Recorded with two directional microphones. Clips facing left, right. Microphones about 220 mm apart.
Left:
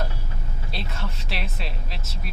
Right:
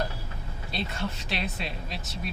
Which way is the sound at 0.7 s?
Centre (ahead or behind).